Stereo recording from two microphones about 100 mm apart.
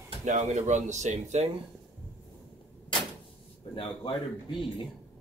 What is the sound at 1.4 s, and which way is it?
Speech, 90° right.